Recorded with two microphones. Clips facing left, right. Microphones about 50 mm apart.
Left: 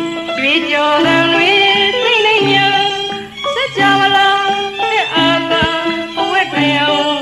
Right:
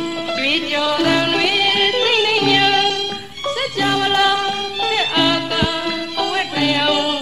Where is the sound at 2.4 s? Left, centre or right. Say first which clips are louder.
Left 3 dB; left.